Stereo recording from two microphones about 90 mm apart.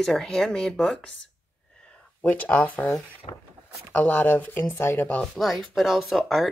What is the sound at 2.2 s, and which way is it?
Speech, 15° left (ahead or behind).